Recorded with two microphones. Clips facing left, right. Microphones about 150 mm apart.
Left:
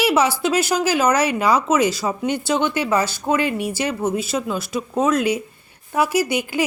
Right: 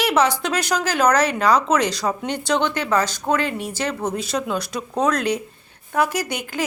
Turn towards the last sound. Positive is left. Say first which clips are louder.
# left 6 dB
turn(degrees=10)  # may be behind; listen again after turning